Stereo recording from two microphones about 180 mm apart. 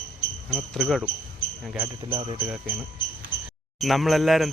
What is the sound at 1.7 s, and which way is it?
Speech, 15° right (ahead or behind).